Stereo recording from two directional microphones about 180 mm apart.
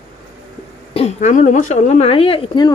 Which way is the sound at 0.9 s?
40° left (ahead or behind).